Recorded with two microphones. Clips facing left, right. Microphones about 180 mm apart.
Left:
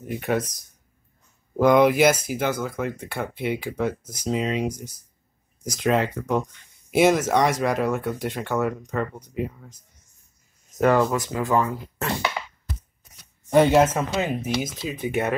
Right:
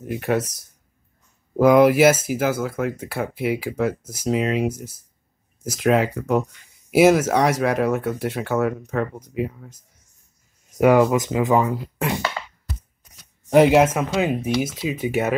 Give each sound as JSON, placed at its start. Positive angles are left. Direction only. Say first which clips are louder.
{"t": 0.0, "sound": "speech", "louder": "right 2 dB", "side_deg": 0}
{"t": 13.5, "sound": "speech", "louder": "right 3 dB", "side_deg": -10}